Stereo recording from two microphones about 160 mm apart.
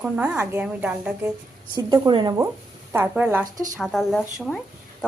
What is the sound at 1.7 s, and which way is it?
Speech, 25° right (ahead or behind).